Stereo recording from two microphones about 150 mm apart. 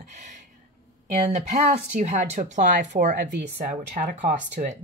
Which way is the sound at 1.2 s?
50° right (ahead or behind).